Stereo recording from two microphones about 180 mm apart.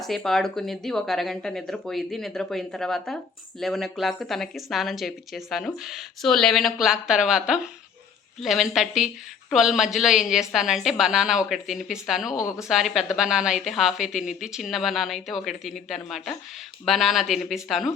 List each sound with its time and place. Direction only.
0.0 s a woman's voice: centre (ahead or behind)
12.4 s speech: 15° left (ahead or behind)
12.6 s a woman's voice: centre (ahead or behind)